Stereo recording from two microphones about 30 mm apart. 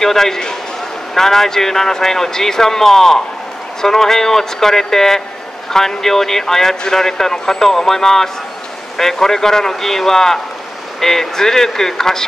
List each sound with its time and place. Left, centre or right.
0.0 s speech: centre